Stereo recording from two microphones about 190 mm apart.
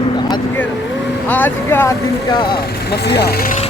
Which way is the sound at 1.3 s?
10° left (ahead or behind).